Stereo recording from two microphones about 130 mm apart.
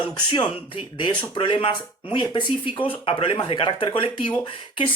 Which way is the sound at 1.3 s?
40° left (ahead or behind).